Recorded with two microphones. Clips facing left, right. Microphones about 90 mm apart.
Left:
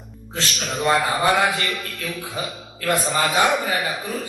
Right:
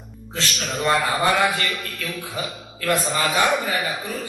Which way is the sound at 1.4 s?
35° left (ahead or behind).